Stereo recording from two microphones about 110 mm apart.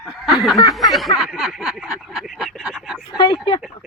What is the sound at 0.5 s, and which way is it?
Speech, 40° left (ahead or behind).